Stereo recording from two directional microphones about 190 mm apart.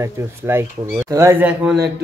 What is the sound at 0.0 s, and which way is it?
Speech, 15° right (ahead or behind).